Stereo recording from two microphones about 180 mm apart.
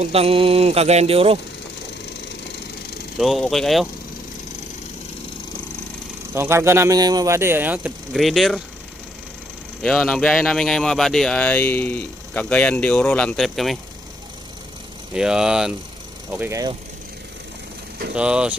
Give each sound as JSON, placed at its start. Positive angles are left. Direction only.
{"t": 0.0, "sound": "speech", "side_deg": -35}
{"t": 3.2, "sound": "speech", "side_deg": 0}
{"t": 6.3, "sound": "speech", "side_deg": -15}
{"t": 9.8, "sound": "speech", "side_deg": 5}
{"t": 15.1, "sound": "speech", "side_deg": -5}
{"t": 18.1, "sound": "speech", "side_deg": -5}